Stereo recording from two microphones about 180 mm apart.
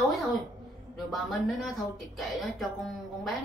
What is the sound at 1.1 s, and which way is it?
Speech, centre (ahead or behind).